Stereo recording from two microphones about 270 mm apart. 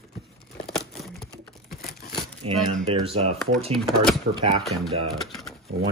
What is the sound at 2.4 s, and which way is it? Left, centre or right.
Speech, right.